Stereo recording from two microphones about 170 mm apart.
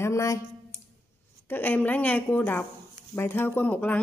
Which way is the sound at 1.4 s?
10° left (ahead or behind).